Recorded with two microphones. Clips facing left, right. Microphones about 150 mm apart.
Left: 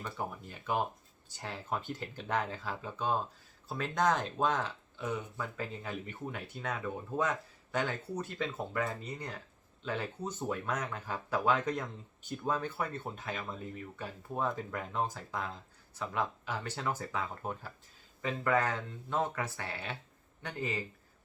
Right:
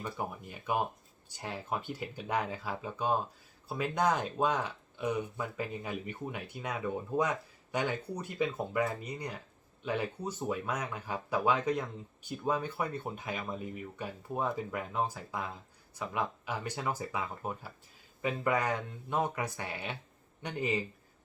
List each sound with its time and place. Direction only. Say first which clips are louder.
0.0 s speech: right 1 dB; 10° right (ahead or behind)